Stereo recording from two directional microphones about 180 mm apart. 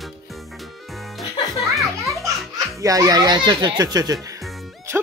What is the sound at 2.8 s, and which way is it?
Speech, 20° right (ahead or behind).